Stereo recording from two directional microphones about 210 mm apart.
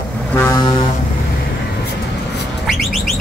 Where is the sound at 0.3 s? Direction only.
10° left (ahead or behind).